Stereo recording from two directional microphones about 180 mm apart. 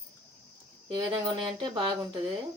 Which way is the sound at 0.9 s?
25° right (ahead or behind).